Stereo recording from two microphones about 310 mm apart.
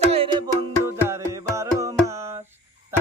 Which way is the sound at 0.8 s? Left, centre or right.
Centre.